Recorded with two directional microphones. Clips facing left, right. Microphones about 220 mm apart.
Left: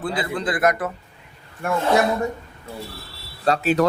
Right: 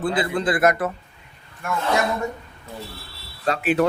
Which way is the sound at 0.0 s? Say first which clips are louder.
Right 3 dB; centre (ahead or behind).